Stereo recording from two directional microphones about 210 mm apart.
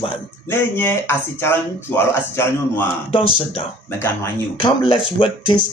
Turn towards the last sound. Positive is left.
turn(degrees=25)  # may be behind; listen again after turning